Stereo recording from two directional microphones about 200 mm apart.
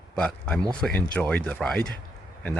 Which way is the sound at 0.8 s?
5° left (ahead or behind).